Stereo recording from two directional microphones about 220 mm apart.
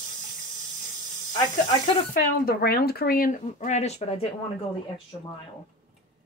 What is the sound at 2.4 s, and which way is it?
Speech, 45° left (ahead or behind).